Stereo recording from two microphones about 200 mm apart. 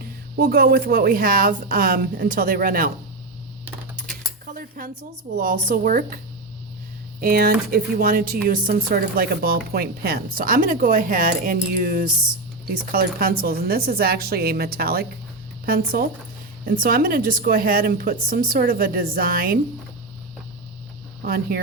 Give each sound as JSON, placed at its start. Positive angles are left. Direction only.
{"t": 0.0, "sound": "speech", "side_deg": -50}
{"t": 4.0, "sound": "a sound", "side_deg": 0}
{"t": 4.8, "sound": "speech", "side_deg": -45}
{"t": 7.2, "sound": "speech", "side_deg": -50}
{"t": 21.2, "sound": "speech", "side_deg": -45}